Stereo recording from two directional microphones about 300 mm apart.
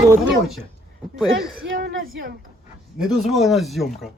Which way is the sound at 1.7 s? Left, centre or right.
Right.